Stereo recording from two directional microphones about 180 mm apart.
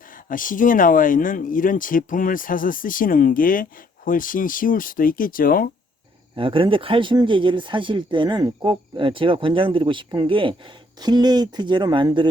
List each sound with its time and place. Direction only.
0.3 s speech: 50° left (ahead or behind)
6.3 s speech: 30° right (ahead or behind)